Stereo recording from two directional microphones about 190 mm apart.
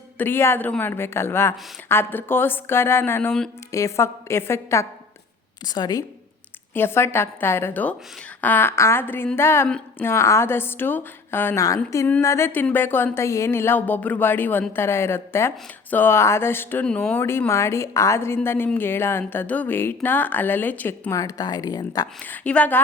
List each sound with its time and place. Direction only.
0.2 s a woman's voice: 10° left (ahead or behind)
3.7 s a woman's voice: 15° left (ahead or behind)
22.2 s a woman's voice: 5° left (ahead or behind)